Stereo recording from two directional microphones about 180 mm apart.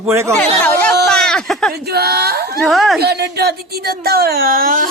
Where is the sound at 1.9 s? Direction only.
60° right (ahead or behind).